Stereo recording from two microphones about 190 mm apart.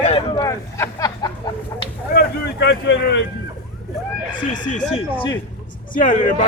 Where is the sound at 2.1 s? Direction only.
55° left (ahead or behind).